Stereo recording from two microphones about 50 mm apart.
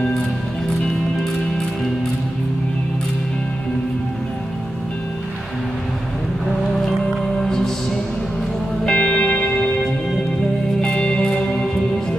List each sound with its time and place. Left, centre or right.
6.9 s music: centre
8.8 s music: left
10.8 s music: centre